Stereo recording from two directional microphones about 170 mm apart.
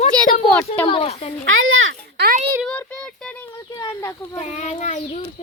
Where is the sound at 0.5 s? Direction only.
10° left (ahead or behind).